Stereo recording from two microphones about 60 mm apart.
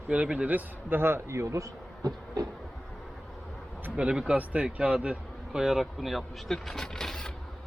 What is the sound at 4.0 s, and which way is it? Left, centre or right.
Speech, centre.